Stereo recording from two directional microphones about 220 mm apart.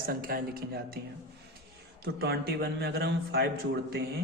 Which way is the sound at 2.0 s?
45° right (ahead or behind).